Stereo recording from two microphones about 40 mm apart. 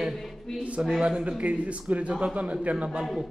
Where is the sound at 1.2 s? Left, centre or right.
Right.